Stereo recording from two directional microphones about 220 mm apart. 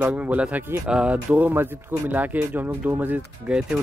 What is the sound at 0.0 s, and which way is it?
Speech, 5° right (ahead or behind).